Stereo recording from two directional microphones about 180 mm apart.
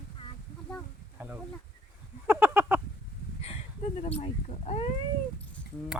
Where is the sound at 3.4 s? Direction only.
35° left (ahead or behind).